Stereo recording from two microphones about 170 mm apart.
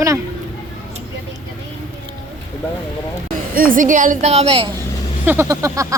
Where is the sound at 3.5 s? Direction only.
55° right (ahead or behind); by 4.7 s 30° right (ahead or behind).